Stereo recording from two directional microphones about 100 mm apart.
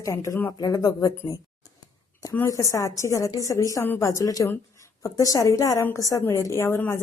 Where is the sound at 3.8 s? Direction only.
20° left (ahead or behind).